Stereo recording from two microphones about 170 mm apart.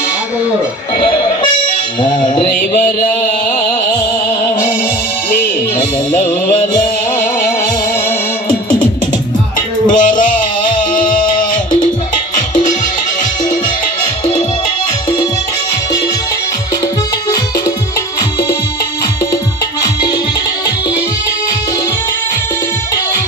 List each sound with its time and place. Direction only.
0.9 s music: 25° left (ahead or behind)
2.7 s music: 50° left (ahead or behind)
9.8 s music: 50° left (ahead or behind)
18.2 s music: 20° left (ahead or behind)